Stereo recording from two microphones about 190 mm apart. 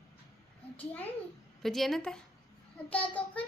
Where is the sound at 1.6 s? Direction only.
Centre (ahead or behind).